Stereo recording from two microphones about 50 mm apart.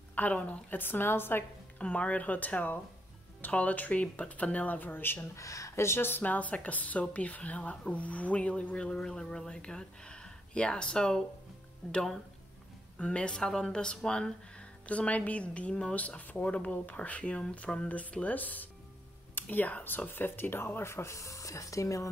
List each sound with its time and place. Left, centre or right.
0.1 s speech: left
1.8 s speech: left
5.3 s speech: left
5.9 s speech: left
6.2 s speech: left; by 11.2 s centre
13.0 s speech: left
14.9 s speech: left